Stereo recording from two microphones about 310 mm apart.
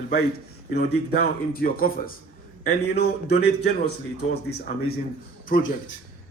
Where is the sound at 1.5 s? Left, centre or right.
Left.